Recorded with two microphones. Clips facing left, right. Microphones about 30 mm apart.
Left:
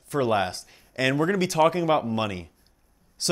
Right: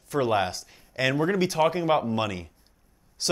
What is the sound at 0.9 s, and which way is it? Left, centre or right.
Speech, left.